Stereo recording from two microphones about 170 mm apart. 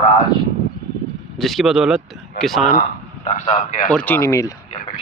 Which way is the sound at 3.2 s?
40° left (ahead or behind).